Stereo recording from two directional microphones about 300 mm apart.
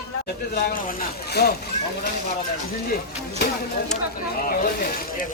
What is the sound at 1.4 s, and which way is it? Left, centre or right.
Speech, left.